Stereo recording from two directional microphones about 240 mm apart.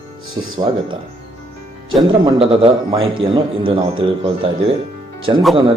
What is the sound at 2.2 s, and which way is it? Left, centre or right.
A man's voice, right.